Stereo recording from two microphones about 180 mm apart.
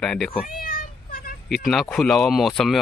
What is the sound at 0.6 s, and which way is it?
Meow, 55° left (ahead or behind).